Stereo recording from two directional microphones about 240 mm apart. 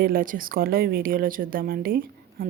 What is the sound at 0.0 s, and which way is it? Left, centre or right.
Speech, right.